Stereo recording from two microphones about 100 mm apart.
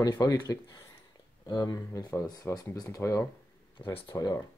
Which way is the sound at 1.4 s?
40° left (ahead or behind).